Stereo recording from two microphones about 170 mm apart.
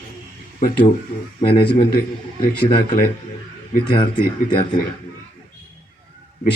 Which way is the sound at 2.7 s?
60° left (ahead or behind).